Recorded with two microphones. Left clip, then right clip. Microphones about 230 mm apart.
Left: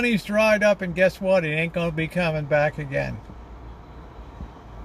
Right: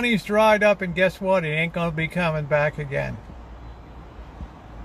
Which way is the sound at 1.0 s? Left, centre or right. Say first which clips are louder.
Left 1 dB; centre.